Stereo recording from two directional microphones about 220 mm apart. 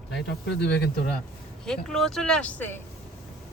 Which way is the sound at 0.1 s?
50° left (ahead or behind).